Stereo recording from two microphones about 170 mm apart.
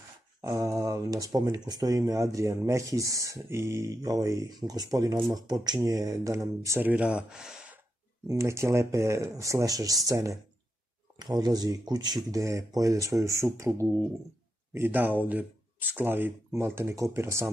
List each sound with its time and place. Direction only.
0.4 s speech: 20° right (ahead or behind)
8.3 s speech: 15° right (ahead or behind)
11.3 s speech: 25° right (ahead or behind)